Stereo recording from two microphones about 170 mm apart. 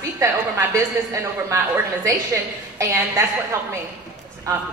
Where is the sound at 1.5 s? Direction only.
15° right (ahead or behind).